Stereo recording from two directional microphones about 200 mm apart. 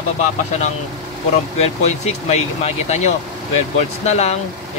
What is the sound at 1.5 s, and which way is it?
Speech, 30° left (ahead or behind).